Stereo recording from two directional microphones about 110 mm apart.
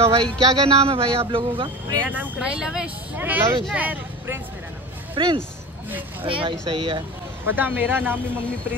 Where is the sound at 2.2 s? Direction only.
10° right (ahead or behind).